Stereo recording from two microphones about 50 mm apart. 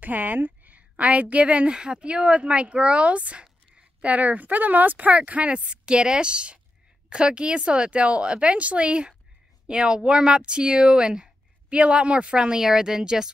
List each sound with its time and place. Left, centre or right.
0.0 s a woman's voice: right; by 13.3 s centre